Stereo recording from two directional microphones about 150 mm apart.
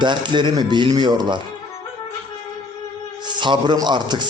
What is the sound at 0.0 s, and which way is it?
A man's voice, 30° right (ahead or behind).